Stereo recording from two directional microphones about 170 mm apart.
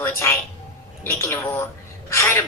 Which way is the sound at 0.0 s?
15° left (ahead or behind).